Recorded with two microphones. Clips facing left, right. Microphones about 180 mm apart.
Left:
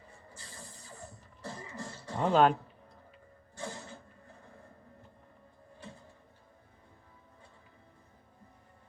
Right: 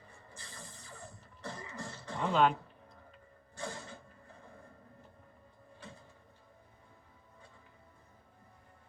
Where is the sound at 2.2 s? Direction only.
40° left (ahead or behind).